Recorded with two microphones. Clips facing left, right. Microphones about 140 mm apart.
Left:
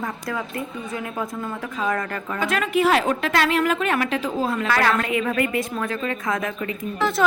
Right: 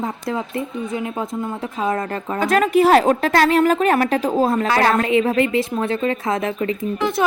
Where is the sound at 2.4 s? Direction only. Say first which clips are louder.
Right 6 dB; 40° right (ahead or behind).